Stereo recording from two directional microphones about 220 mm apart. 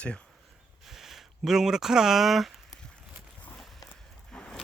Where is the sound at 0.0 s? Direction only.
5° left (ahead or behind).